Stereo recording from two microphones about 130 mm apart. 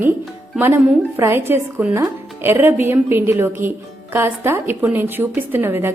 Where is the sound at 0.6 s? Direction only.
20° right (ahead or behind).